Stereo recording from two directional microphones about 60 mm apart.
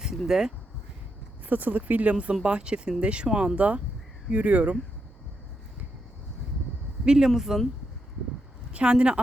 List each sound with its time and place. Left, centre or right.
0.3 s speech: centre
1.5 s speech: right
7.0 s speech: centre
8.7 s speech: centre